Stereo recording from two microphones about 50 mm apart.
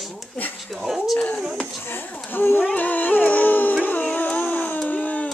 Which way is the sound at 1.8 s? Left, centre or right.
Left.